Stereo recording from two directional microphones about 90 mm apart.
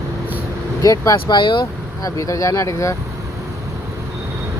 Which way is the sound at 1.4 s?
60° left (ahead or behind).